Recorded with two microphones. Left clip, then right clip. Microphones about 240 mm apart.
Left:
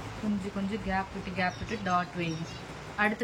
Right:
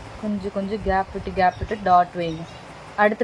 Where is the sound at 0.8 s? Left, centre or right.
Right.